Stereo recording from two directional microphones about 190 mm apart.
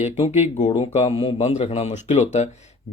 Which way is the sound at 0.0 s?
35° left (ahead or behind).